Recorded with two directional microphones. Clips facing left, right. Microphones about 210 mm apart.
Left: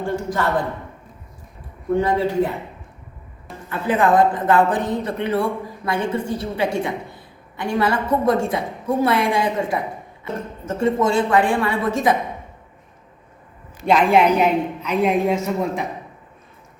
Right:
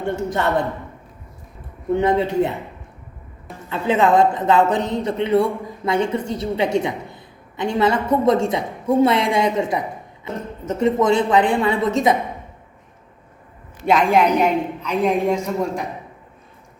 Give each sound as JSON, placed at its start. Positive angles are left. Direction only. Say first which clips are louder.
{"t": 0.0, "sound": "a woman's voice", "louder": "right 1 dB", "side_deg": -25}
{"t": 2.0, "sound": "a woman's voice", "louder": "right 1 dB", "side_deg": -20}
{"t": 3.7, "sound": "a woman's voice", "louder": "right 1 dB", "side_deg": -20}
{"t": 13.8, "sound": "a woman's voice", "louder": "left 1 dB", "side_deg": 5}